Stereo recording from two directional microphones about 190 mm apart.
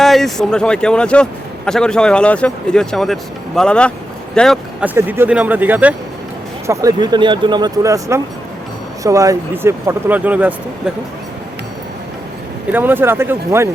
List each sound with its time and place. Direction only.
0.0 s a man's voice: centre (ahead or behind)
4.8 s speech: 10° right (ahead or behind)
6.7 s speech: 20° right (ahead or behind)
12.7 s speech: 10° right (ahead or behind)